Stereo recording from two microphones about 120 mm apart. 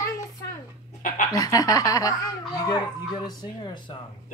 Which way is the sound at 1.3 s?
30° left (ahead or behind).